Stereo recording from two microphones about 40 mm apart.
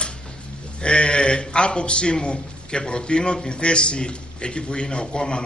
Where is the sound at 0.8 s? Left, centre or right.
Left.